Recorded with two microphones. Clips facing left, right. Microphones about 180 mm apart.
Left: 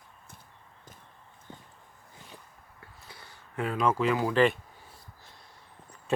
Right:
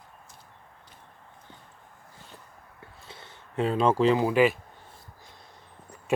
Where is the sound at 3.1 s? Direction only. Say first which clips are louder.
Right 4 dB; 25° right (ahead or behind).